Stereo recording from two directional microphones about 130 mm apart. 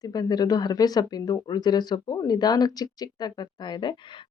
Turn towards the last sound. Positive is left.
turn(degrees=40)  # may be behind; listen again after turning